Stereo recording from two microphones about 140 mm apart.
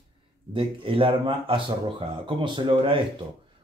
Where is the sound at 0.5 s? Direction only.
40° right (ahead or behind).